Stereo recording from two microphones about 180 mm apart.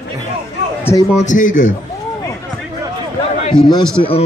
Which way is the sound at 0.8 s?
15° left (ahead or behind).